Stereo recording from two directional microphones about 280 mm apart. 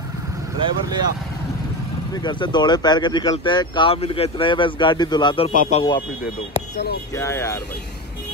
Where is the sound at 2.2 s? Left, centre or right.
Centre.